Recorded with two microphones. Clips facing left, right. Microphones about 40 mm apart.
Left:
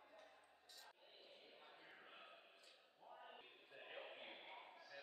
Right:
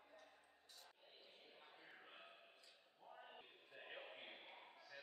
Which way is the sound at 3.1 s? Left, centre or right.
Centre.